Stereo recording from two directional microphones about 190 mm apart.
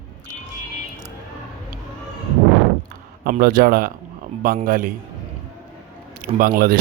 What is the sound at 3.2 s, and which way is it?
Speech, 50° right (ahead or behind).